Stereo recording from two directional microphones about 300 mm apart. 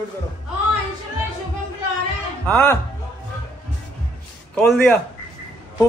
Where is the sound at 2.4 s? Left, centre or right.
Centre.